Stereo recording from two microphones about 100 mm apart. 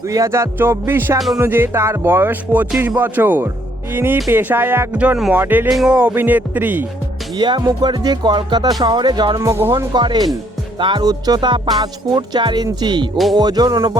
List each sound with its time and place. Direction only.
0.1 s speech: 30° right (ahead or behind)
5.6 s speech: 5° right (ahead or behind)
5.9 s speech: 15° right (ahead or behind)
7.3 s music: 50° right (ahead or behind)
9.4 s speech: 30° right (ahead or behind)
9.6 s music: 50° right (ahead or behind)